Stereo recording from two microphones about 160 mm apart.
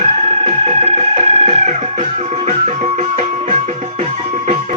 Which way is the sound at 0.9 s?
40° right (ahead or behind).